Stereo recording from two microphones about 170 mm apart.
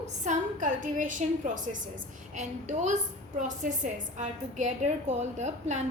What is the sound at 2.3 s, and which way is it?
A woman's voice, 45° right (ahead or behind).